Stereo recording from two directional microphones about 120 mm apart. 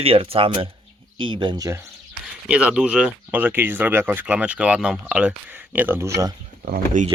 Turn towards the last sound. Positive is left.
turn(degrees=-90)